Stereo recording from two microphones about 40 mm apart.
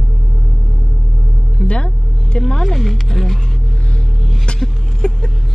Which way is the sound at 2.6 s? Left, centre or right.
Centre.